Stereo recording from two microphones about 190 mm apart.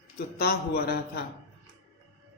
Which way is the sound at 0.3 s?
55° left (ahead or behind).